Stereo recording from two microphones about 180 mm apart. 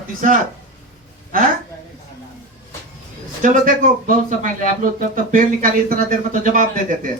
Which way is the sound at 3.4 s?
50° right (ahead or behind).